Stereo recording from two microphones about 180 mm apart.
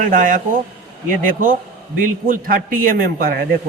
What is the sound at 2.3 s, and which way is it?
A man's voice, 50° right (ahead or behind).